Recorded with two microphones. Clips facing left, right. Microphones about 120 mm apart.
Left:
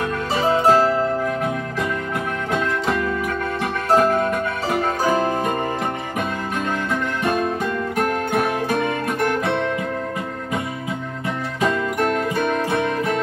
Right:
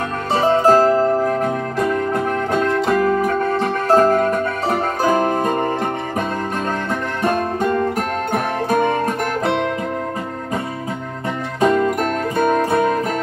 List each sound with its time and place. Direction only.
0.5 s music: 40° right (ahead or behind)
7.3 s music: 40° right (ahead or behind)
11.6 s music: 40° right (ahead or behind)